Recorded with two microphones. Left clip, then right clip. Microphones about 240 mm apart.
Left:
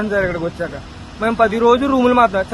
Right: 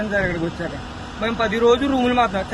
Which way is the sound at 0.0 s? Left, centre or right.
Centre.